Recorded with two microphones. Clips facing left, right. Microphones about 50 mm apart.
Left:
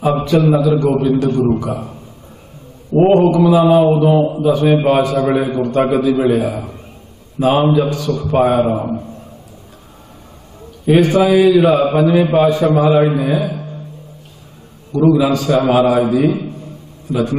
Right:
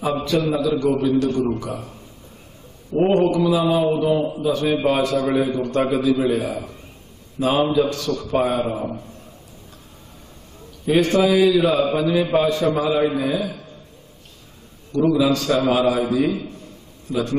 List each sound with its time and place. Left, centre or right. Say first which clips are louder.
0.0 s a man's voice: left 7 dB; centre
1.7 s a man's voice: left 7 dB; centre
3.1 s a man's voice: left 6 dB; centre
3.3 s a man's voice: left 8 dB; left
10.9 s a man's voice: left 5 dB; centre
15.0 s a man's voice: left 5 dB; centre